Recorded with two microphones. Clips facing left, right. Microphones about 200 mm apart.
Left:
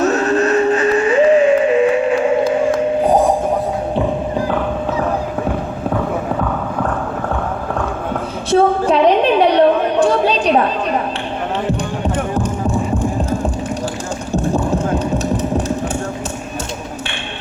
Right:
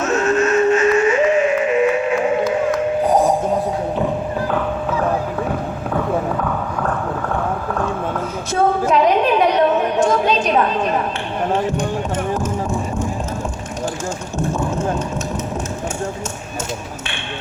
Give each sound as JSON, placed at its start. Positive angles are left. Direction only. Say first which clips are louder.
{"t": 0.0, "sound": "music", "louder": "left 2 dB", "side_deg": 35}
{"t": 8.4, "sound": "chatter", "louder": "left 4 dB", "side_deg": 30}
{"t": 12.0, "sound": "music", "louder": "left 2 dB", "side_deg": 35}
{"t": 14.3, "sound": "music", "louder": "left 5 dB", "side_deg": 35}